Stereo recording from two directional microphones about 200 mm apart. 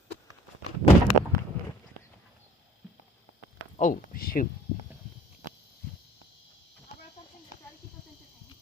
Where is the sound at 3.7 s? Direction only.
40° left (ahead or behind).